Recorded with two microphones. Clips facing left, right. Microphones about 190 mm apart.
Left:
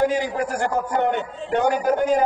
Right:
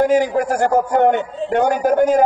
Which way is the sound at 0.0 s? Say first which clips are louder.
Right 6 dB; 50° right (ahead or behind).